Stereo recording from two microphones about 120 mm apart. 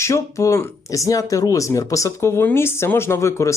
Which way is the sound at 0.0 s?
25° left (ahead or behind).